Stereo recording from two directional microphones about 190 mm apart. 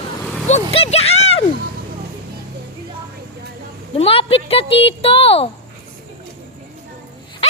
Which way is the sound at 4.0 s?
30° left (ahead or behind).